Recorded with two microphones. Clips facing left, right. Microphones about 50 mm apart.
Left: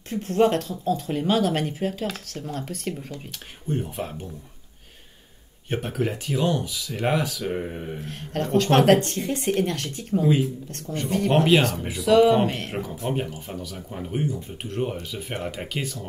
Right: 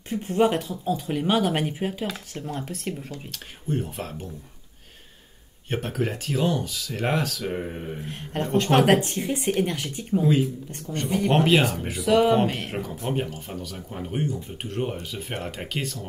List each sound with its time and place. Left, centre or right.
0.1 s speech: centre
2.4 s speech: centre
5.7 s speech: centre
10.1 s speech: centre